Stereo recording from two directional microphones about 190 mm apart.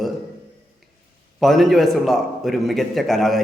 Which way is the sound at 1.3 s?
Centre (ahead or behind).